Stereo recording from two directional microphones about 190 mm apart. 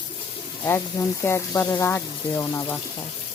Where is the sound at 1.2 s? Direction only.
15° left (ahead or behind).